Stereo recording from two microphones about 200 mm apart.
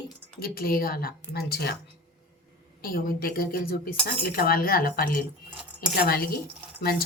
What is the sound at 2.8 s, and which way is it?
A woman's voice, 45° left (ahead or behind).